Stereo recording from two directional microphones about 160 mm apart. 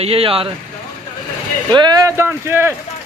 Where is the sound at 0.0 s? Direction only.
35° right (ahead or behind).